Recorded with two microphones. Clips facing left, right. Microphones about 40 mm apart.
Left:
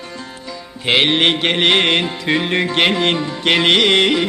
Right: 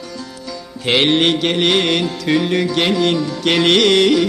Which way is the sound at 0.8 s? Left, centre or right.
Centre.